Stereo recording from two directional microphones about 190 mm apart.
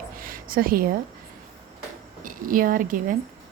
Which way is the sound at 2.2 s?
45° right (ahead or behind).